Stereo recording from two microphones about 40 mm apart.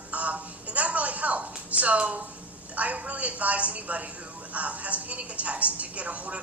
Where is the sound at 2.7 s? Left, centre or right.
Right.